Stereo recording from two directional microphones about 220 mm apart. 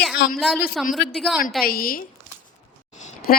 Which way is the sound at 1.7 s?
40° left (ahead or behind).